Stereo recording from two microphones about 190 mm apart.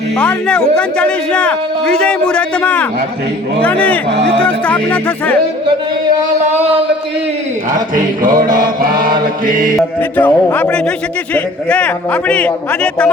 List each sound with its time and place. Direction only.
0.2 s a man's voice: 5° left (ahead or behind)
7.7 s mantra: 45° right (ahead or behind)
10.0 s a man's voice: 10° left (ahead or behind)